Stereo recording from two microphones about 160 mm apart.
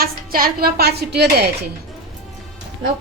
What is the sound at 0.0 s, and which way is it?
A woman's voice, 65° right (ahead or behind).